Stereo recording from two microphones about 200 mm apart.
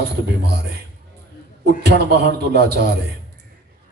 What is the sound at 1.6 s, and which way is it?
Speech, 55° right (ahead or behind).